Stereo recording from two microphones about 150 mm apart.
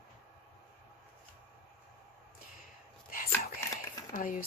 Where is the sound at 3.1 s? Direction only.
70° left (ahead or behind).